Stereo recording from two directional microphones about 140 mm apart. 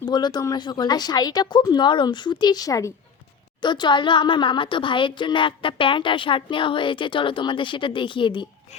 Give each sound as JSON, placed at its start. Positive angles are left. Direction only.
{"t": 0.0, "sound": "a woman's voice", "side_deg": 30}